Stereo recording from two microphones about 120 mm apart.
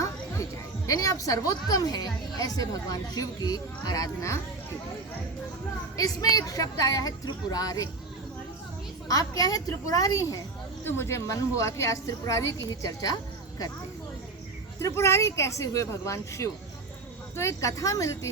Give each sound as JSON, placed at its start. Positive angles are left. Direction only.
{"t": 0.9, "sound": "a woman's voice", "side_deg": 30}
{"t": 6.0, "sound": "a woman's voice", "side_deg": 30}
{"t": 9.0, "sound": "a woman's voice", "side_deg": 30}
{"t": 14.8, "sound": "a woman's voice", "side_deg": 25}